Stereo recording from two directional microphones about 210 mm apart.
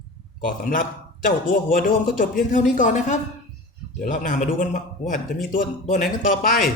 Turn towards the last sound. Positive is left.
turn(degrees=40)  # may be behind; listen again after turning